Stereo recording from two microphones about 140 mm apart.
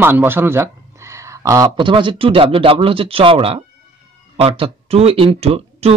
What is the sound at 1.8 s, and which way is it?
Speech, 35° right (ahead or behind).